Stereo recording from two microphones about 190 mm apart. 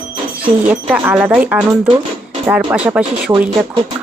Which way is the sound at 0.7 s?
10° right (ahead or behind).